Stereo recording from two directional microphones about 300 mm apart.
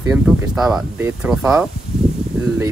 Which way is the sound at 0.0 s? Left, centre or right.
Centre.